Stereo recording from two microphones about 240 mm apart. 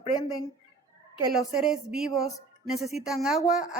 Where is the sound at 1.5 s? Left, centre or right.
Centre.